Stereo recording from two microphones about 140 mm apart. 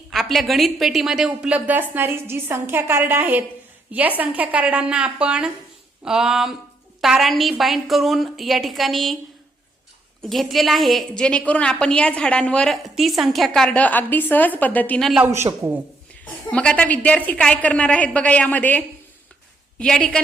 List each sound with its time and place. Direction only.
0.1 s a woman's voice: centre (ahead or behind)
10.2 s a woman's voice: centre (ahead or behind)
15.2 s a woman's voice: 15° right (ahead or behind)
16.2 s a woman's voice: 10° left (ahead or behind)
19.8 s a woman's voice: 5° left (ahead or behind)